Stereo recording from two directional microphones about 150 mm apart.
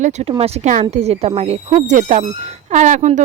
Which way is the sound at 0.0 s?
45° right (ahead or behind).